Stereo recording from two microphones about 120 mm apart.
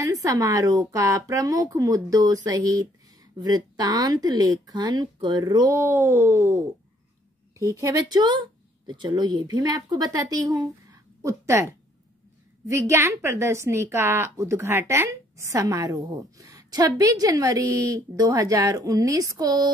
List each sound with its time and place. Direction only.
0.0 s a woman's voice: 30° right (ahead or behind)
5.7 s a woman's voice: 20° right (ahead or behind)